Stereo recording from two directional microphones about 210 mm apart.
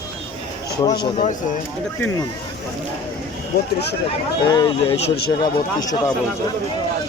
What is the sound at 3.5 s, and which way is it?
Speech, 50° left (ahead or behind).